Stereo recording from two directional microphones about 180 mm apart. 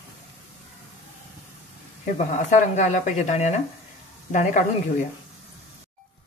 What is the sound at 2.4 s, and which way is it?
A woman's voice, 40° left (ahead or behind).